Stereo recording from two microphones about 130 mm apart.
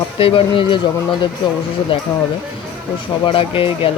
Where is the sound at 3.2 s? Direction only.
45° left (ahead or behind).